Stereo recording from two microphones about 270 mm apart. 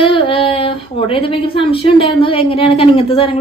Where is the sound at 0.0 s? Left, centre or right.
Centre.